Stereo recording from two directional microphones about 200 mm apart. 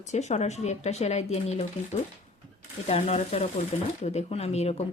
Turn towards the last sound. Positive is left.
turn(degrees=30)  # may be behind; listen again after turning